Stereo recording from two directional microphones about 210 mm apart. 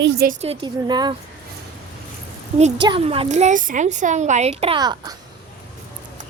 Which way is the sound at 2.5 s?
25° right (ahead or behind).